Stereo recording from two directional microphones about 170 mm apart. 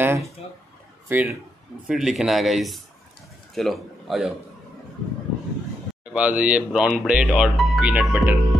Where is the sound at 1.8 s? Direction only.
Centre (ahead or behind).